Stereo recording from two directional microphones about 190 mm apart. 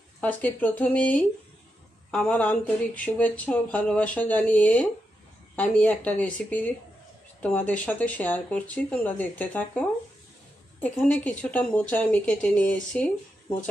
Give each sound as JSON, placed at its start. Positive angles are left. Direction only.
{"t": 0.2, "sound": "speech", "side_deg": 10}